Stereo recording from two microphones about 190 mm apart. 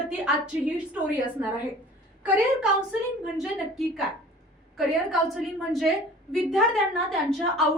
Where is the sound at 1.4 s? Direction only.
10° right (ahead or behind).